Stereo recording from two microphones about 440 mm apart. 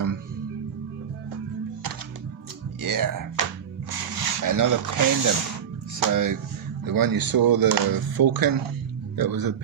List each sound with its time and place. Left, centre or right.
2.8 s a man's voice: right